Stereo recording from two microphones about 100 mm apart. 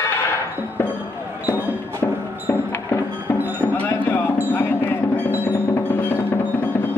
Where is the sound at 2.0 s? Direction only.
25° left (ahead or behind).